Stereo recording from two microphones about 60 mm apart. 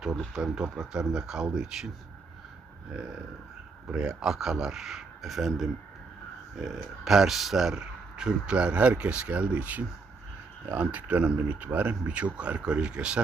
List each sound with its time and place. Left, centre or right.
0.3 s speech: centre
3.8 s speech: centre